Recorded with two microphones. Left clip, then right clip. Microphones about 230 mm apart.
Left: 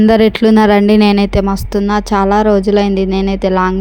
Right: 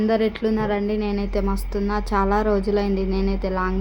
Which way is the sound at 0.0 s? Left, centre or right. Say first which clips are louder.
Left 11 dB; left.